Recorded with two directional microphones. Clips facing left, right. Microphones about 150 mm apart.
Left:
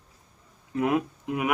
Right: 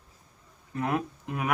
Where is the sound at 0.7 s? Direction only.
15° left (ahead or behind).